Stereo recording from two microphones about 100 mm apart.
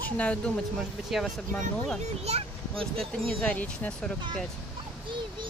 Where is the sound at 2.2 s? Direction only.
85° right.